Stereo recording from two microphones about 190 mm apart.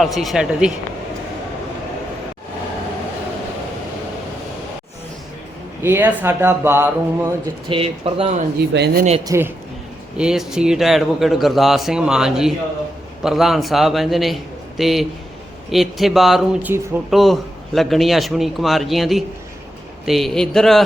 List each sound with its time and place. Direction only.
0.0 s speech: centre (ahead or behind)
5.8 s speech: 10° right (ahead or behind)
7.7 s speech: 30° right (ahead or behind)
8.7 s speech: 55° right (ahead or behind)
9.2 s speech: 15° right (ahead or behind)
10.2 s speech: 5° right (ahead or behind)